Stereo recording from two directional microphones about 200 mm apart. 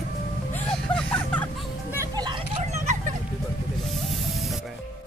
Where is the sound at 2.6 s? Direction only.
35° right (ahead or behind).